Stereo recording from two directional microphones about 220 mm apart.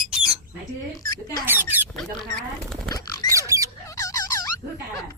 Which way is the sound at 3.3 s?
15° right (ahead or behind).